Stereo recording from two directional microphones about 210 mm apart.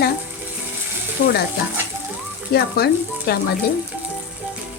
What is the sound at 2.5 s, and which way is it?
Speech, 50° left (ahead or behind).